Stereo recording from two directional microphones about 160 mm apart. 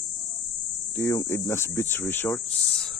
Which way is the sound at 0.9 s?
20° left (ahead or behind).